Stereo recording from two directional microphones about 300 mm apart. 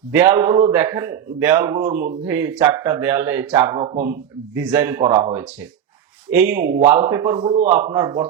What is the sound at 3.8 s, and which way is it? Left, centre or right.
Speech, right.